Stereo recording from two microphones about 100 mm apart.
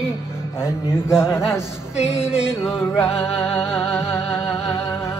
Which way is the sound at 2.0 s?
10° right (ahead or behind).